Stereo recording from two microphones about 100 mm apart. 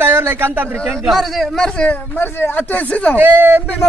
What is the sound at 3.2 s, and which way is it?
Speech, 20° right (ahead or behind).